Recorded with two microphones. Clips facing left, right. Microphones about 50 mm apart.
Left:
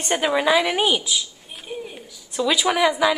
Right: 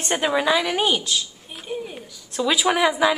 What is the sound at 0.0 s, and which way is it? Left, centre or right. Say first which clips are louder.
A woman's voice: left 1 dB; centre.